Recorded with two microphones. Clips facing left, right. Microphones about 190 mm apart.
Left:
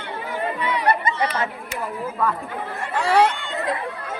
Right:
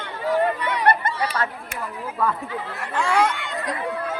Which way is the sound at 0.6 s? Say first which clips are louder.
Even; 55° right (ahead or behind).